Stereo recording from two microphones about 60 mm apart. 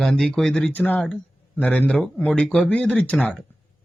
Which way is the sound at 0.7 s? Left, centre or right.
Left.